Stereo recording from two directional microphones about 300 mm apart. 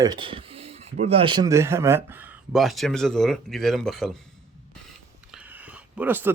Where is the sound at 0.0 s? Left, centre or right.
Centre.